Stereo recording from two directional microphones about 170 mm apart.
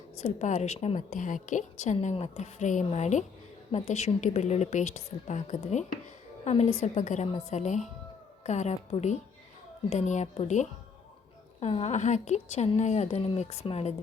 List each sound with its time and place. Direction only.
0.2 s a woman's voice: 40° left (ahead or behind)